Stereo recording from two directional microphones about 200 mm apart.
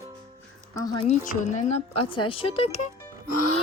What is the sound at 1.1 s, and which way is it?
Speech, 35° left (ahead or behind).